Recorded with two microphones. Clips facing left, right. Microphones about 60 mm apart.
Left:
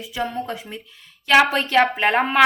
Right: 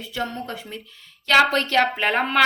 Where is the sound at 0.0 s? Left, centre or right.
Centre.